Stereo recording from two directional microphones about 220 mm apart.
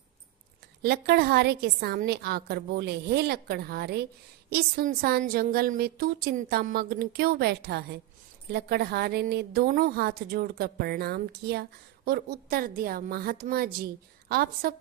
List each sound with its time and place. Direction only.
0.8 s a woman's voice: 45° right (ahead or behind)